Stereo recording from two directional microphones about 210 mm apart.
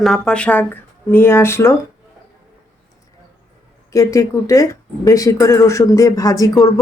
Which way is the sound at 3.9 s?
15° left (ahead or behind).